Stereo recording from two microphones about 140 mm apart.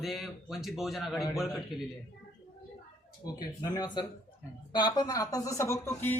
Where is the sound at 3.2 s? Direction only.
30° left (ahead or behind).